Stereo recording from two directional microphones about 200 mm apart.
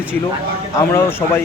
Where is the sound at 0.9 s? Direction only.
10° left (ahead or behind).